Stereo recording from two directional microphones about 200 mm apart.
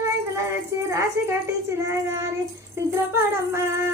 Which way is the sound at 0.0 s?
15° right (ahead or behind).